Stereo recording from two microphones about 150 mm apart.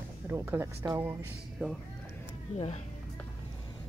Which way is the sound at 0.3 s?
15° right (ahead or behind).